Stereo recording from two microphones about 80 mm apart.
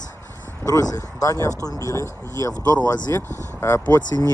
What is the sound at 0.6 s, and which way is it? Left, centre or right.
Speech, left.